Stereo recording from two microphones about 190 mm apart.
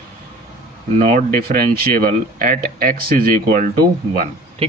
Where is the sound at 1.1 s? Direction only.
50° right (ahead or behind).